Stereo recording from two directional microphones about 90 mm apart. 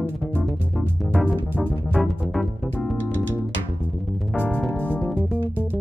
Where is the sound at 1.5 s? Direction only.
15° right (ahead or behind).